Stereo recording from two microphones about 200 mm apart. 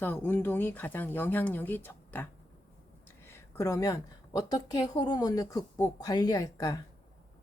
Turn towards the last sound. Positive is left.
turn(degrees=20)  # may be behind; listen again after turning